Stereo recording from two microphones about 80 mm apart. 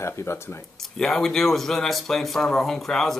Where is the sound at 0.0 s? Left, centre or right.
Left.